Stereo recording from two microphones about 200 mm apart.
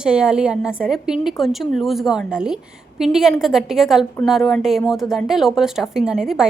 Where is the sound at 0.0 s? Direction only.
5° right (ahead or behind).